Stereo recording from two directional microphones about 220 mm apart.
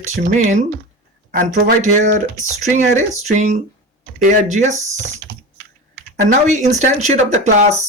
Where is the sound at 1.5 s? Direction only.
35° right (ahead or behind).